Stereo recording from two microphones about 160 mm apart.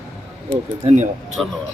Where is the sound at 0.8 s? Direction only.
45° right (ahead or behind).